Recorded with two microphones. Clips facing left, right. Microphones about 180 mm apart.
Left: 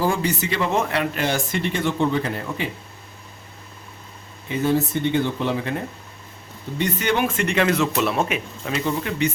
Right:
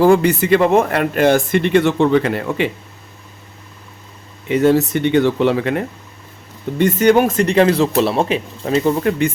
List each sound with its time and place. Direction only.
0.0 s speech: 65° right (ahead or behind)
4.4 s speech: 75° right (ahead or behind)
6.7 s speech: 45° right (ahead or behind)